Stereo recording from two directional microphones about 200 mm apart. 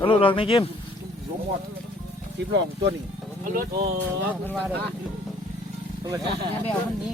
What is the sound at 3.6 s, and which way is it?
Speech, 50° right (ahead or behind).